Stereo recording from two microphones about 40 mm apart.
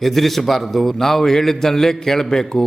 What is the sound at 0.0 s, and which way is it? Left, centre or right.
A man's voice, centre.